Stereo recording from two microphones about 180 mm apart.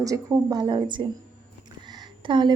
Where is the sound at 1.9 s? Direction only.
25° right (ahead or behind).